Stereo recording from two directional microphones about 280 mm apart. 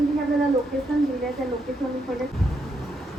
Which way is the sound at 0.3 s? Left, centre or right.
Centre.